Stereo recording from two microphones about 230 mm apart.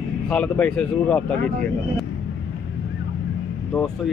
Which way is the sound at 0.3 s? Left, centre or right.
Centre.